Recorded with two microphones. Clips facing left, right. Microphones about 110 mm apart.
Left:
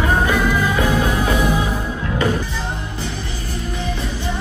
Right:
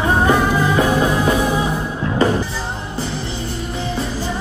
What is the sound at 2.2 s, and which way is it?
Music, 35° right (ahead or behind).